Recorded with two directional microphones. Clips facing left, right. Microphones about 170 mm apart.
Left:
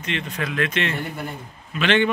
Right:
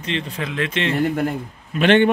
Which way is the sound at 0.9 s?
90° right.